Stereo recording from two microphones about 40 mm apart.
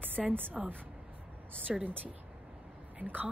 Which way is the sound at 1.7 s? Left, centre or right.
Centre.